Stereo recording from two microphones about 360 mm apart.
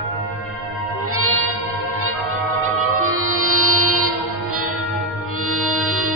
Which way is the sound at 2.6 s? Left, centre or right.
Right.